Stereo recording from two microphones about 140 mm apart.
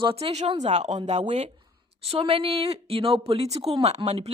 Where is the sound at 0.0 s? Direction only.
45° right (ahead or behind).